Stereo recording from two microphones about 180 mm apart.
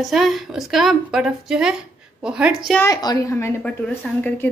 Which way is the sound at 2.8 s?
15° left (ahead or behind).